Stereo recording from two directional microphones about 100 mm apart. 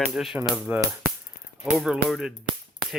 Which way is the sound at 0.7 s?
20° right (ahead or behind).